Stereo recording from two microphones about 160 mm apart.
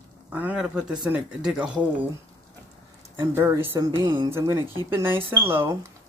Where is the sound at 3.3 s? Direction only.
15° right (ahead or behind).